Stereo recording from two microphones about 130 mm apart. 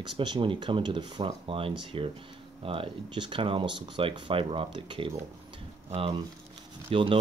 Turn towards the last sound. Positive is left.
turn(degrees=-40)  # may be behind; listen again after turning